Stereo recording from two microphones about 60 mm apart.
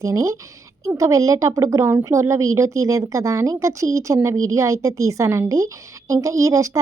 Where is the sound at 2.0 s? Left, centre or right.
Right.